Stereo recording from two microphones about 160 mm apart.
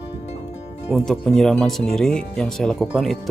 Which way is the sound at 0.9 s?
Centre (ahead or behind).